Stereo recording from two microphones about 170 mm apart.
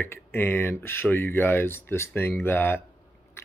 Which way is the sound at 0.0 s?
10° left (ahead or behind).